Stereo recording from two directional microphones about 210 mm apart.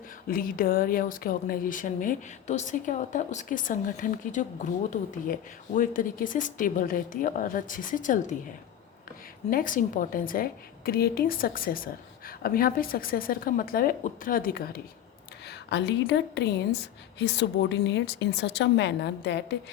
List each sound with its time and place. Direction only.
0.3 s speech: 40° left (ahead or behind)
9.5 s a woman's voice: 40° left (ahead or behind)
15.4 s a woman's voice: 55° left (ahead or behind)